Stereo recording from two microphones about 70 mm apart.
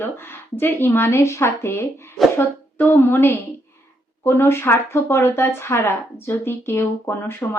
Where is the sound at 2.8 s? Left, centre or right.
Left.